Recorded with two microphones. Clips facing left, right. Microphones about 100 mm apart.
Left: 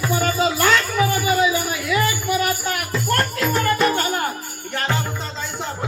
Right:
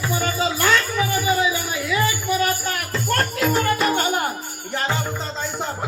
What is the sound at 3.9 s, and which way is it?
Music, 15° right (ahead or behind).